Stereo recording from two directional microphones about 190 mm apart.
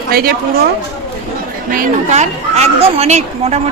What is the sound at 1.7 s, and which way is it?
Speech, 50° right (ahead or behind).